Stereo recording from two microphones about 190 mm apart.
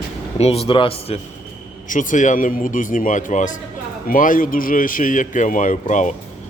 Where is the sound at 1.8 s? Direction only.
45° left (ahead or behind).